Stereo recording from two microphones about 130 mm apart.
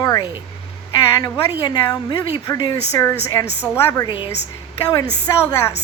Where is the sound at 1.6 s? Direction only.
35° left (ahead or behind).